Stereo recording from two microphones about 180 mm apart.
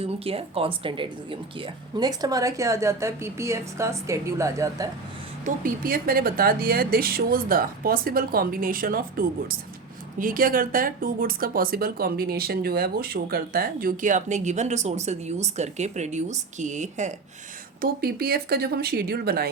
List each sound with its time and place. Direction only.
0.3 s speech: 30° right (ahead or behind); by 4.9 s 15° right (ahead or behind)
5.6 s speech: 55° right (ahead or behind)
17.7 s speech: 60° right (ahead or behind)